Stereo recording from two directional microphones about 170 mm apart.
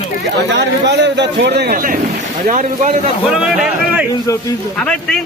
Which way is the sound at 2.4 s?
45° right (ahead or behind).